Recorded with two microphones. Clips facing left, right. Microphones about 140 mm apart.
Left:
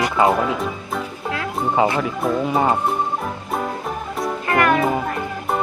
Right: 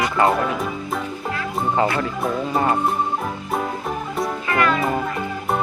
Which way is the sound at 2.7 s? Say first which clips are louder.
Even; centre (ahead or behind).